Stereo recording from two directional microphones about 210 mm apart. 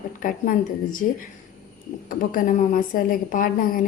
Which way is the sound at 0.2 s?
40° left (ahead or behind).